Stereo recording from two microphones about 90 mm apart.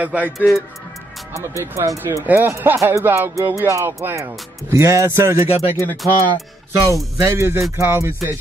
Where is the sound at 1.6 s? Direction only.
30° right (ahead or behind).